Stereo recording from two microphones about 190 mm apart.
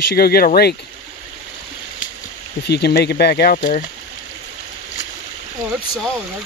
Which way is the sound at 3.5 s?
45° left (ahead or behind).